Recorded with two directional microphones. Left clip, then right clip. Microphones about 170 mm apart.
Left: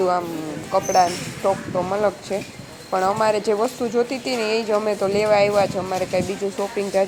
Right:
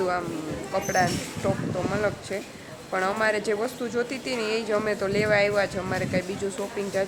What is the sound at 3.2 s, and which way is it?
Speech, 15° left (ahead or behind).